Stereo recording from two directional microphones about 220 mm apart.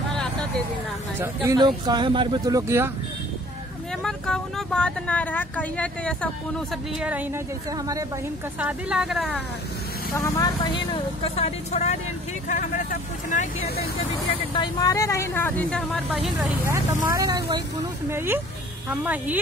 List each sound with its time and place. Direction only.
0.1 s vehicle: 5° left (ahead or behind)
1.2 s speech: 15° right (ahead or behind)
4.0 s speech: centre (ahead or behind)
7.0 s speech: 5° right (ahead or behind)
8.5 s speech: 5° right (ahead or behind)
10.1 s speech: 15° left (ahead or behind); by 13.8 s 40° left (ahead or behind)
14.5 s speech: 20° left (ahead or behind); by 19.3 s 5° right (ahead or behind)